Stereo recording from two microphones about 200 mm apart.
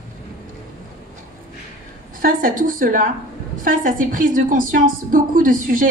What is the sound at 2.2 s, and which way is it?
A woman's voice, 45° right (ahead or behind).